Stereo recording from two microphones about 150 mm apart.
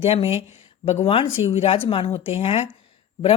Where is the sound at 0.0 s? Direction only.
40° left (ahead or behind).